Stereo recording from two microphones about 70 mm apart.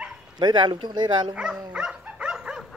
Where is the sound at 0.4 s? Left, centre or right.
Right.